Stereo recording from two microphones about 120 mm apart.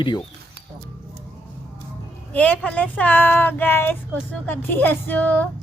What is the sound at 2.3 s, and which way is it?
Speech, 10° left (ahead or behind).